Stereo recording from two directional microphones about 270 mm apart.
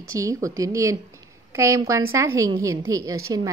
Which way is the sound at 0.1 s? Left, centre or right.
Centre.